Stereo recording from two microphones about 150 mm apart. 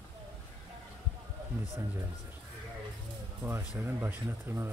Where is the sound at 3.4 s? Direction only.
15° right (ahead or behind).